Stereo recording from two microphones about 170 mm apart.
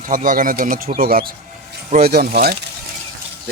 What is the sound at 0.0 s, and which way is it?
Speech, 50° right (ahead or behind).